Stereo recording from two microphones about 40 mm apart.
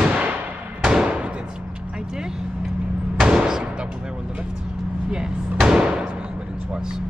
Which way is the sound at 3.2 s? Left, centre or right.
Centre.